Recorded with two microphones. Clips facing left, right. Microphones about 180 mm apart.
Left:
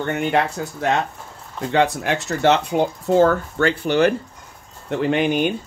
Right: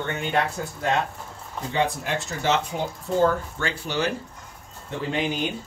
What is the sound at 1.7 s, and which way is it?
Speech, 75° left (ahead or behind).